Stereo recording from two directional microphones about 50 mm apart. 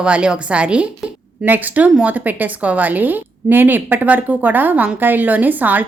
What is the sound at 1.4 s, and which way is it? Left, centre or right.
A woman's voice, right.